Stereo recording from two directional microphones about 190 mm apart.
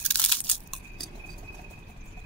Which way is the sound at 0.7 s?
Centre (ahead or behind).